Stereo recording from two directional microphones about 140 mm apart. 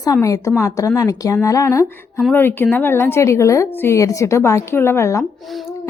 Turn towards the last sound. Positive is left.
turn(degrees=0)  # may be behind; listen again after turning